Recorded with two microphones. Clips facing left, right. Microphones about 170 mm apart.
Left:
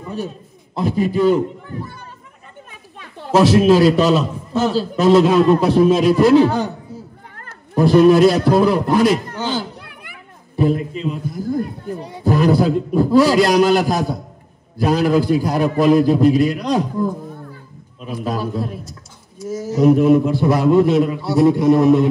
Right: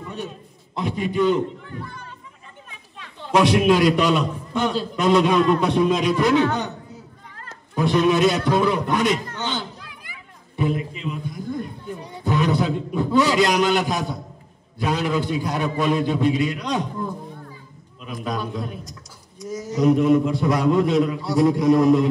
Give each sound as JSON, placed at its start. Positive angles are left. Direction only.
{"t": 0.0, "sound": "a sound", "side_deg": 35}
{"t": 0.7, "sound": "a man's voice", "side_deg": 35}
{"t": 3.5, "sound": "a man's voice", "side_deg": 30}
{"t": 4.2, "sound": "a man's voice", "side_deg": 5}
{"t": 4.7, "sound": "a man's voice", "side_deg": 30}
{"t": 5.9, "sound": "a sound", "side_deg": 5}
{"t": 6.1, "sound": "a man's voice", "side_deg": 35}
{"t": 7.7, "sound": "a man's voice", "side_deg": 35}
{"t": 9.8, "sound": "children playing", "side_deg": 60}
{"t": 10.5, "sound": "a man's voice", "side_deg": 35}
{"t": 18.9, "sound": "a man's voice", "side_deg": 5}
{"t": 20.8, "sound": "a sound", "side_deg": 0}